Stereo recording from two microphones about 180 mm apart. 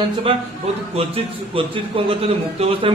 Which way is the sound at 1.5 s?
30° right (ahead or behind).